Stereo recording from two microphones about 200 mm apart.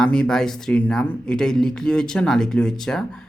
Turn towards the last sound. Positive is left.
turn(degrees=0)  # may be behind; listen again after turning